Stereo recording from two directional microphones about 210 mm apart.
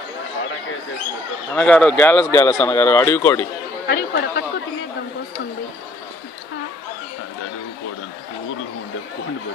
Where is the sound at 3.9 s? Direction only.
55° left (ahead or behind).